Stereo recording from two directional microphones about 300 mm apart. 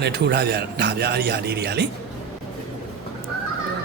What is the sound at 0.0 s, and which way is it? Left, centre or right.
Speech, right.